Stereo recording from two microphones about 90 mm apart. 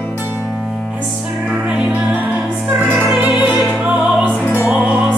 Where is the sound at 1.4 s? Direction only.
10° right (ahead or behind).